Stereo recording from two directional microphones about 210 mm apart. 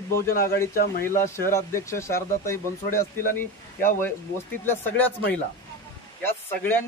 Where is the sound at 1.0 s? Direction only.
10° left (ahead or behind).